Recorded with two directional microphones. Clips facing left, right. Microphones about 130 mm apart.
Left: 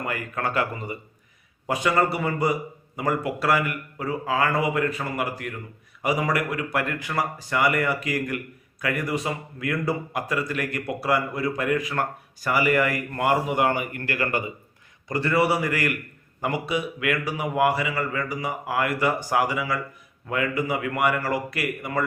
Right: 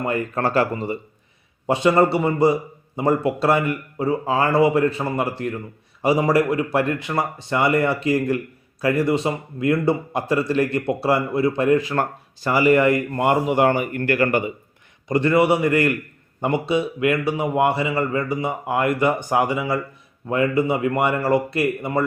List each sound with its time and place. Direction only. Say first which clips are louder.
0.0 s a man's voice: right 6 dB; 30° right (ahead or behind)